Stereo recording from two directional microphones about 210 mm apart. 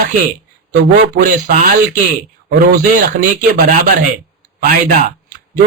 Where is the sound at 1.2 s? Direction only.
40° right (ahead or behind).